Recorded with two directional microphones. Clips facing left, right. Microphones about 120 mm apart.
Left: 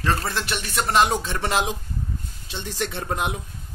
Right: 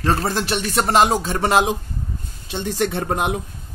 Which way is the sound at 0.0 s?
35° right (ahead or behind).